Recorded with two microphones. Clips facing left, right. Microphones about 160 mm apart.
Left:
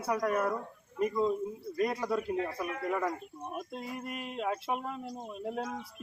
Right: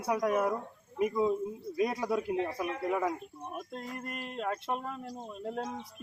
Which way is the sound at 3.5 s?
10° left (ahead or behind).